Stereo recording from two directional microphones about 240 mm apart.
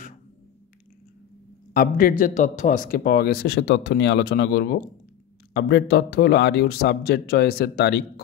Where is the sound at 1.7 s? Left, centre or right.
Left.